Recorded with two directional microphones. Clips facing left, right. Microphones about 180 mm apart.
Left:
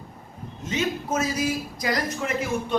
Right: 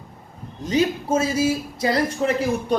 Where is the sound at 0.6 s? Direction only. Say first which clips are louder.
Right 6 dB; 35° right (ahead or behind).